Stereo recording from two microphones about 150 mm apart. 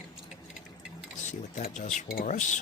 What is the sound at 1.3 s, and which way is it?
Speech, 55° left (ahead or behind).